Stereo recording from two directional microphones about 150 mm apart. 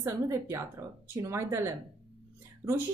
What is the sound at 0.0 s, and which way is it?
A woman's voice, 20° right (ahead or behind).